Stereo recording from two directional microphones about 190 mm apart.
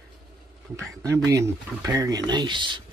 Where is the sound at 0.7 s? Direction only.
15° right (ahead or behind).